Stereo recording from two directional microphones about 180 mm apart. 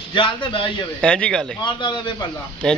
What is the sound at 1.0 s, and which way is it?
Speech, 5° left (ahead or behind).